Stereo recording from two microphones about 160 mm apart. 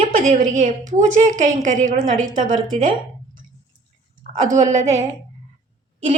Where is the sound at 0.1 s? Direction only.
60° right (ahead or behind).